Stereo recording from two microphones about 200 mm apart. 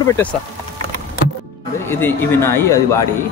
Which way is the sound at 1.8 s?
10° left (ahead or behind).